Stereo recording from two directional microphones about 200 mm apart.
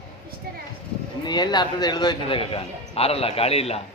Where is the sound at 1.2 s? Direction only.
20° left (ahead or behind).